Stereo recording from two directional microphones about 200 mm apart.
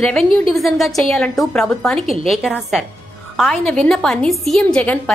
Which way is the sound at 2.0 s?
30° right (ahead or behind).